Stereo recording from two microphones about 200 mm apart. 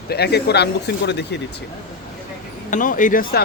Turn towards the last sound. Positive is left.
turn(degrees=45)  # may be behind; listen again after turning